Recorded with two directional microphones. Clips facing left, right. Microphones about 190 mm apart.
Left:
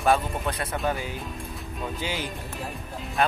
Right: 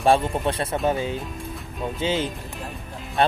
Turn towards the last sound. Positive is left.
turn(degrees=-30)  # may be behind; listen again after turning